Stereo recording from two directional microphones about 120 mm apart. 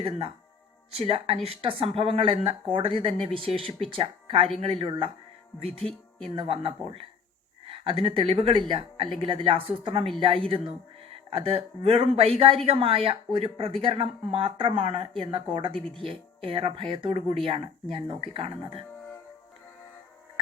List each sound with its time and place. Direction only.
0.9 s speech: 50° right (ahead or behind)
5.8 s speech: 5° left (ahead or behind)
6.3 s speech: 50° right (ahead or behind)